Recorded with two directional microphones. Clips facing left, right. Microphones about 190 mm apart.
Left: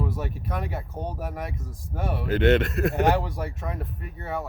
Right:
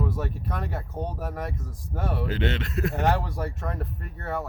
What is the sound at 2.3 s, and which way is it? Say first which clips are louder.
Speech: left 8 dB; 55° left (ahead or behind).